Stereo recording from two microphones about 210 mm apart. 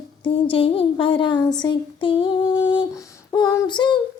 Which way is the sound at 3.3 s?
15° left (ahead or behind).